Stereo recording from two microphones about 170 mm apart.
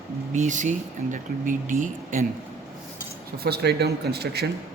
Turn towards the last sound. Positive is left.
turn(degrees=-70)  # may be behind; listen again after turning